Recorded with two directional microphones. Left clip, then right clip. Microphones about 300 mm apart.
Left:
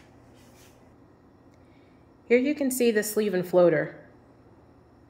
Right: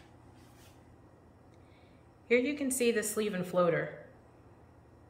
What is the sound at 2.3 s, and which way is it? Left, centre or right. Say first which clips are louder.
A woman's voice: left 6 dB; centre.